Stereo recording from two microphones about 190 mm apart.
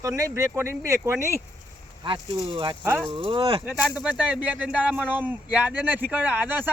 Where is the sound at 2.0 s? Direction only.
25° right (ahead or behind).